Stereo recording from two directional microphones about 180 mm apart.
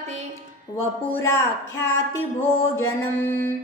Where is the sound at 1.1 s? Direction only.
10° left (ahead or behind).